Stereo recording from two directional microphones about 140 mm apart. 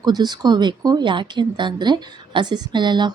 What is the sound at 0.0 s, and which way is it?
Speech, 30° right (ahead or behind).